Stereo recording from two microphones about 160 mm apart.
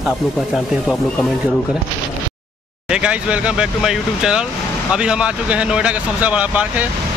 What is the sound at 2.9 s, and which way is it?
Speech, 5° right (ahead or behind).